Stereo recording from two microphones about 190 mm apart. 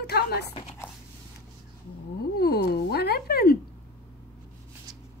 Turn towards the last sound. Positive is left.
turn(degrees=55)  # may be behind; listen again after turning